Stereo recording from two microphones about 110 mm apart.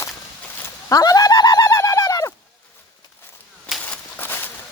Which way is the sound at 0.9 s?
35° left (ahead or behind).